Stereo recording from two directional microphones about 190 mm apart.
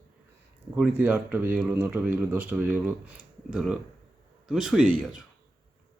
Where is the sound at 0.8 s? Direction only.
10° right (ahead or behind).